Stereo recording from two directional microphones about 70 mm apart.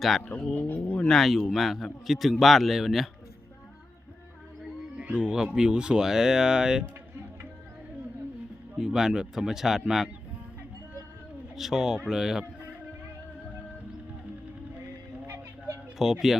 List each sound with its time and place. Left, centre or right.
0.5 s speech: left
1.0 s a man's voice: centre
4.9 s speech: centre
8.8 s speech: centre
11.5 s a man's voice: centre
16.0 s a man's voice: centre